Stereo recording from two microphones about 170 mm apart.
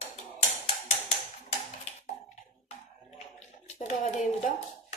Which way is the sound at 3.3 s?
40° left (ahead or behind).